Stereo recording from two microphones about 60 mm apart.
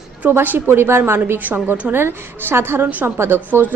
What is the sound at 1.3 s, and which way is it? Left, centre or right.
A woman's voice, right.